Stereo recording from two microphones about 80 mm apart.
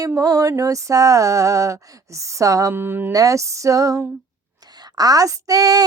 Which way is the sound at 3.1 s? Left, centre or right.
Right.